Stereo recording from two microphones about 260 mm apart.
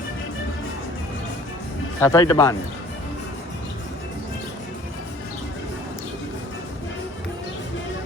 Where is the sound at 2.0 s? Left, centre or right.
Centre.